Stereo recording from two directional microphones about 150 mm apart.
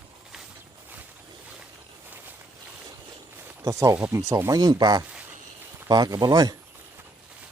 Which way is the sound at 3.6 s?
20° right (ahead or behind).